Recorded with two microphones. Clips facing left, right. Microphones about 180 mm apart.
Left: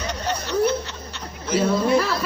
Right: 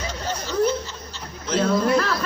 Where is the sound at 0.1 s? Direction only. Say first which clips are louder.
Left 2 dB; 65° left (ahead or behind).